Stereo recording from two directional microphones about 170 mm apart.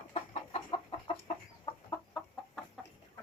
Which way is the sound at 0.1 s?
35° left (ahead or behind).